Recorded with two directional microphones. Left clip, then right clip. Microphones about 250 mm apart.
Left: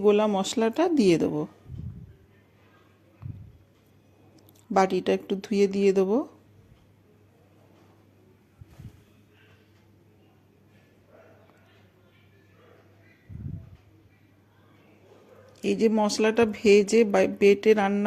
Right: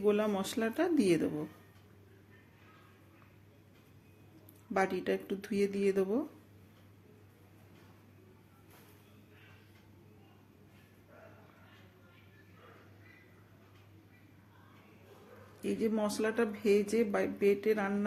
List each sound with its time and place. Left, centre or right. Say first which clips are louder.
0.0 s speech: left 9 dB; left
4.7 s speech: left 9 dB; left
15.6 s speech: left 10 dB; left